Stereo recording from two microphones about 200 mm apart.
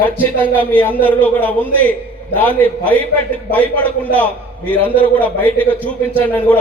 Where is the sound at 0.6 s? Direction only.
10° left (ahead or behind).